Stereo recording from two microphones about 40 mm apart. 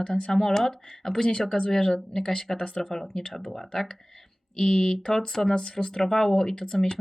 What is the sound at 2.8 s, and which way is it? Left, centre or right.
Speech, centre.